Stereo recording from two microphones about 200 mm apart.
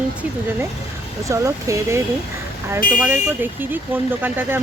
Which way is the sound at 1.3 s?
15° right (ahead or behind).